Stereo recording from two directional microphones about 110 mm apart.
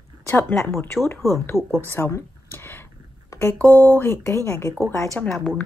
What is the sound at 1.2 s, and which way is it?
Speech, 30° right (ahead or behind).